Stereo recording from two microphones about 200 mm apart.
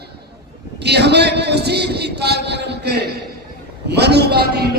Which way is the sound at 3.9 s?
55° right (ahead or behind).